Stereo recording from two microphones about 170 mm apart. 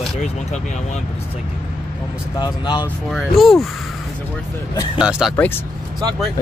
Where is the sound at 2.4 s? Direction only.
25° left (ahead or behind).